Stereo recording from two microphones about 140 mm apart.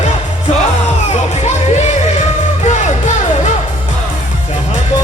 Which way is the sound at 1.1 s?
50° left (ahead or behind).